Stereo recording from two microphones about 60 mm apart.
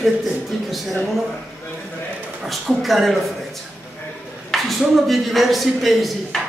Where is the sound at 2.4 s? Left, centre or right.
Centre.